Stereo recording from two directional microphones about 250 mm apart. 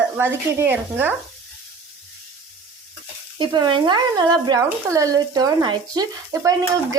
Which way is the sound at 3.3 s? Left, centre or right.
Centre.